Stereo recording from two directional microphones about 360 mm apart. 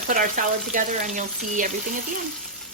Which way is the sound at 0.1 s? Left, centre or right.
Right.